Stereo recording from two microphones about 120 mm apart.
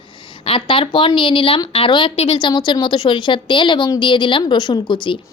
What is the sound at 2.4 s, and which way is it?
A woman's voice, 40° left (ahead or behind).